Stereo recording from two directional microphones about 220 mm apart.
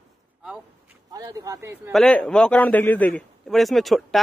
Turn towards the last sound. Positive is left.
turn(degrees=0)  # may be behind; listen again after turning